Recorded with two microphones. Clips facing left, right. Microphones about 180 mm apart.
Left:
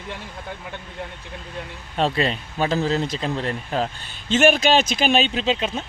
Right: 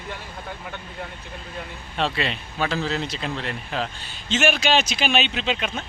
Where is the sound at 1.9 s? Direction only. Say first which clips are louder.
Left 4 dB; 40° left (ahead or behind).